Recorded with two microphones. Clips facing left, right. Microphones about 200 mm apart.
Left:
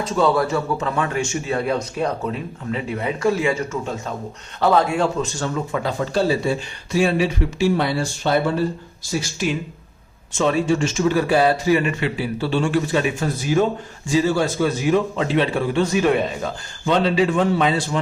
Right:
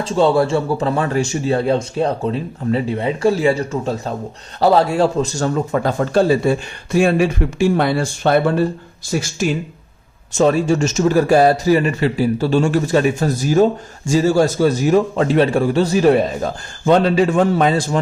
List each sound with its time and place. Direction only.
0.0 s a man's voice: 30° right (ahead or behind); by 9.3 s 60° right (ahead or behind)
10.3 s a man's voice: 40° right (ahead or behind)